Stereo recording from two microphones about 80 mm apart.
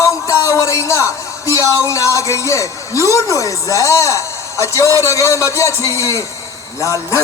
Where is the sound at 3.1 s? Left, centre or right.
Left.